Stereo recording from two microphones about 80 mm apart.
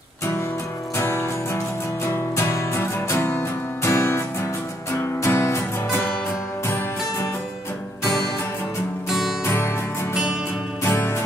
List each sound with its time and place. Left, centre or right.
0.9 s music: left
3.2 s music: centre
3.8 s music: left
5.2 s music: left
9.4 s music: left
10.8 s music: left